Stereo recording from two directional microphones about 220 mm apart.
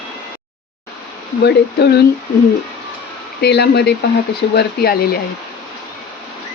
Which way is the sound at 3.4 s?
50° left (ahead or behind).